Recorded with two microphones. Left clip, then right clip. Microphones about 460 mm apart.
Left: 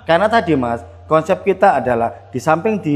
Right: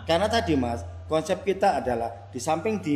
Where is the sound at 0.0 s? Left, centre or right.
Left.